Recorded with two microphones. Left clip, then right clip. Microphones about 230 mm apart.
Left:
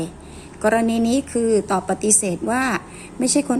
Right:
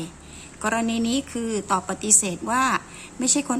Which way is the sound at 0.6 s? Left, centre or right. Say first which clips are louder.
Left 7 dB; right.